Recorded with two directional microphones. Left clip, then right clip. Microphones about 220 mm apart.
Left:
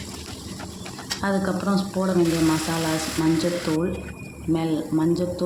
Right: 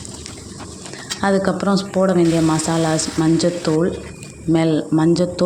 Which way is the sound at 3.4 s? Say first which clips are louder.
Right 6 dB; 30° right (ahead or behind).